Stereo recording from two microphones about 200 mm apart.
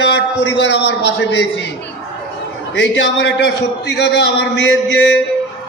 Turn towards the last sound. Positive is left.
turn(degrees=65)  # may be behind; listen again after turning